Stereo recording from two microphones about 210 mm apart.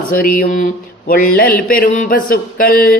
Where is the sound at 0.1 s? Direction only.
40° left (ahead or behind).